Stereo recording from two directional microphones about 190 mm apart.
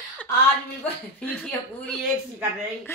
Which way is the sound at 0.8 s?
5° left (ahead or behind).